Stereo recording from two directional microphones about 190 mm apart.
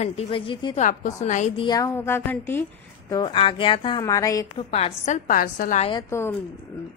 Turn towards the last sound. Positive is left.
turn(degrees=15)  # may be behind; listen again after turning